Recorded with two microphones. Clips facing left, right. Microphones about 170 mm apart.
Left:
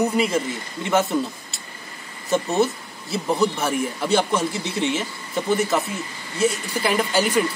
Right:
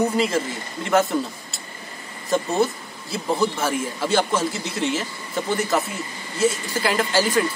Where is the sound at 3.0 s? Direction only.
20° left (ahead or behind).